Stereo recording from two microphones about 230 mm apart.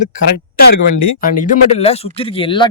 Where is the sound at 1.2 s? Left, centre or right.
Left.